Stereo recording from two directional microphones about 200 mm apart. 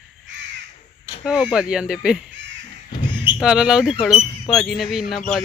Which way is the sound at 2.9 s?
25° left (ahead or behind).